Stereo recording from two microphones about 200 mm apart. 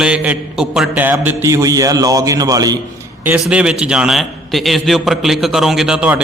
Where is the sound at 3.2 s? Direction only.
5° right (ahead or behind).